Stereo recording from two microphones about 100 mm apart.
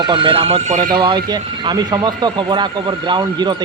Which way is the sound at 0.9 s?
50° right (ahead or behind).